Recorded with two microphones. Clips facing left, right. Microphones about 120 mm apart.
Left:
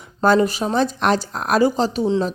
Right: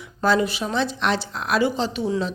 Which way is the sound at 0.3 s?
45° left (ahead or behind).